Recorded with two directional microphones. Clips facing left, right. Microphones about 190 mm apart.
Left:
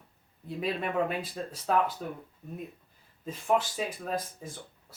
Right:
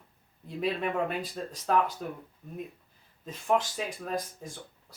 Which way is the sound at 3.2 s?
5° left (ahead or behind).